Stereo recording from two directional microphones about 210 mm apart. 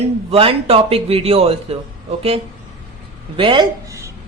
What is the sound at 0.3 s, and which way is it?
A man's voice, 25° right (ahead or behind).